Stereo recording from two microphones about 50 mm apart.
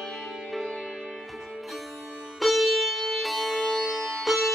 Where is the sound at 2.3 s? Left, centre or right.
Centre.